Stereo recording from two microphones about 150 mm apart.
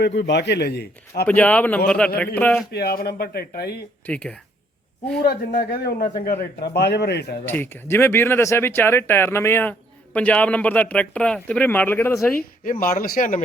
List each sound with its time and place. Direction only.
0.6 s a man's voice: 90° left
1.3 s speech: 10° left (ahead or behind)
2.7 s a man's voice: 90° left
4.0 s speech: 10° left (ahead or behind)
5.2 s a man's voice: 90° left
7.4 s speech: 15° left (ahead or behind)
12.6 s speech: 70° left (ahead or behind)